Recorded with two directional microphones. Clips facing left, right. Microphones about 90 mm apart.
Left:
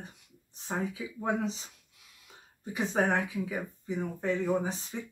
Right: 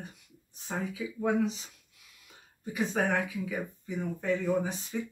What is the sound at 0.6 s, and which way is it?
Speech, 30° left (ahead or behind).